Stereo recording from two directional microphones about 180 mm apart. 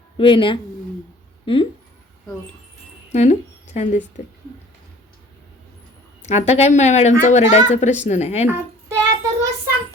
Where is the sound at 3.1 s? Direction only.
40° left (ahead or behind).